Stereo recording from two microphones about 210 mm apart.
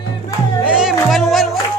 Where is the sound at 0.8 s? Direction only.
Centre (ahead or behind).